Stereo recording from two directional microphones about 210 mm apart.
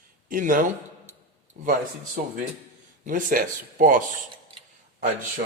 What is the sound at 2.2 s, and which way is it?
A man's voice, 40° right (ahead or behind).